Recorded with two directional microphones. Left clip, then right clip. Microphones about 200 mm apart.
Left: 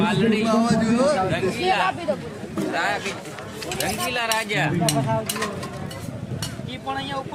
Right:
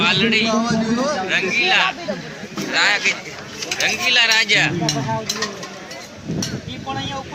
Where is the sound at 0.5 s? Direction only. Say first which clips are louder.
Right 1 dB; 25° left (ahead or behind).